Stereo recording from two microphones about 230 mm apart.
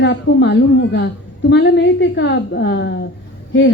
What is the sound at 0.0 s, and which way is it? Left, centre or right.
A woman's voice, left.